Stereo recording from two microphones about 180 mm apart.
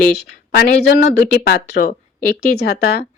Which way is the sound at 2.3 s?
65° left (ahead or behind).